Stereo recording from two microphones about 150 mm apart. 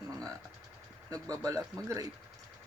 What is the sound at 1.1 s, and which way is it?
Speech, 20° right (ahead or behind).